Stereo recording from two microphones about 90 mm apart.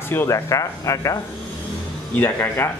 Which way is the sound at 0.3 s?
35° left (ahead or behind).